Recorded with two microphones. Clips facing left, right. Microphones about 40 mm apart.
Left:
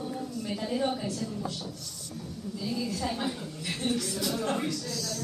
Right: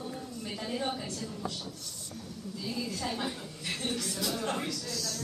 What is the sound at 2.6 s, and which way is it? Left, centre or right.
A woman's voice, centre.